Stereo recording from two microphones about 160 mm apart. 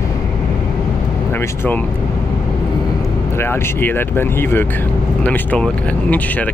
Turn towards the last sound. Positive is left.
turn(degrees=10)  # may be behind; listen again after turning